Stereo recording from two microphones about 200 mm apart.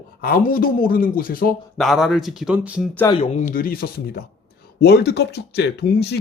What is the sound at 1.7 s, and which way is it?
Speech, centre (ahead or behind).